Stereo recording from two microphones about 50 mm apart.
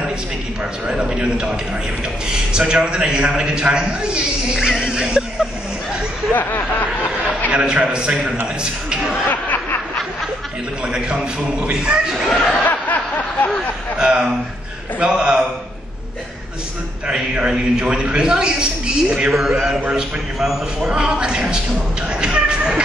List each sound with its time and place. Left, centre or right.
0.8 s a man's voice: centre
6.3 s speech: left
7.5 s a man's voice: centre
11.7 s a man's voice: centre
12.4 s a sound: left
13.9 s a man's voice: right
17.1 s a man's voice: centre
19.3 s a man's voice: centre
22.1 s a sound: centre